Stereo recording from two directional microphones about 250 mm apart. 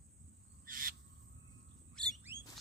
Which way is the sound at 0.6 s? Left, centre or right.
Right.